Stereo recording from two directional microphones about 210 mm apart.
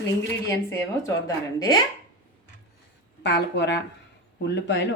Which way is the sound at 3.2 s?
55° left (ahead or behind).